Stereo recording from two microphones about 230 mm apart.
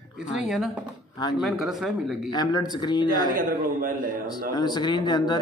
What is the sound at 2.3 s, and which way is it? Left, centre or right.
Speech, centre.